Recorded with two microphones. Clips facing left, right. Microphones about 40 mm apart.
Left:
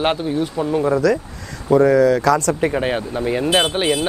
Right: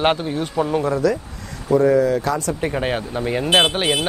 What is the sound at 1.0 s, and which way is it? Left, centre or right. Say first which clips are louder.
Speech: left 2 dB; left.